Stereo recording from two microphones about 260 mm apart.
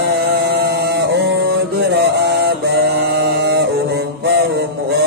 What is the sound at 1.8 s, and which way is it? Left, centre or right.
Mantra, right.